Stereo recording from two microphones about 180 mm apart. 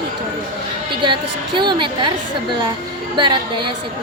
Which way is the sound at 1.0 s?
25° right (ahead or behind).